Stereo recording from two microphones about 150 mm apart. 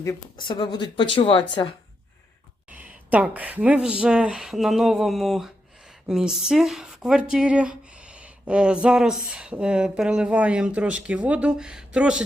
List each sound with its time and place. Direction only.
0.3 s speech: 30° left (ahead or behind)
2.6 s speech: 10° right (ahead or behind)